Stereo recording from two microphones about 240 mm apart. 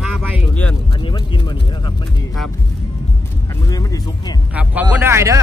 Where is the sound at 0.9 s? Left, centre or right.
Left.